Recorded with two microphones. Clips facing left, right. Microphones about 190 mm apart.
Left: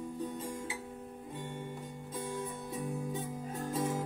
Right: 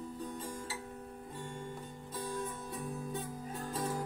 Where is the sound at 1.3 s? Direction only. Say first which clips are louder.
Left 2 dB; 20° left (ahead or behind).